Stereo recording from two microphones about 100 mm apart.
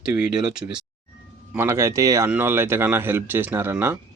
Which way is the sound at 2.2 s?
20° right (ahead or behind).